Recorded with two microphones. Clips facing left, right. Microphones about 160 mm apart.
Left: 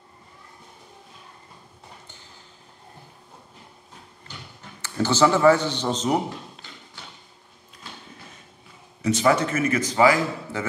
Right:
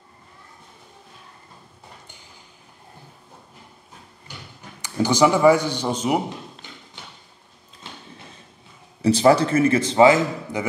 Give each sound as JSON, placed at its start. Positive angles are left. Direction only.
{"t": 4.6, "sound": "a man's voice", "side_deg": -15}
{"t": 9.0, "sound": "a man's voice", "side_deg": -35}